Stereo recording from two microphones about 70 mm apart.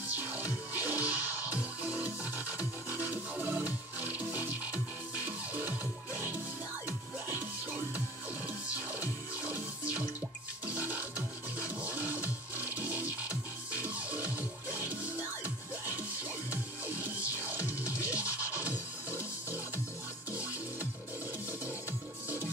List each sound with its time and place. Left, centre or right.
0.1 s music: right
10.7 s music: right
16.4 s music: right